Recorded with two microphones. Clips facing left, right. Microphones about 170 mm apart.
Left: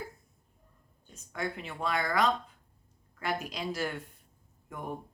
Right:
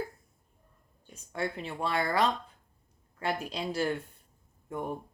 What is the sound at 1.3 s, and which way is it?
A woman's voice, 30° right (ahead or behind).